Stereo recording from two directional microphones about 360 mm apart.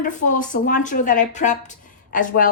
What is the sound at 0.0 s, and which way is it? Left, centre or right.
Speech, left.